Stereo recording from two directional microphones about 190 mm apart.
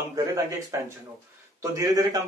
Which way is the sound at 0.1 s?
15° right (ahead or behind).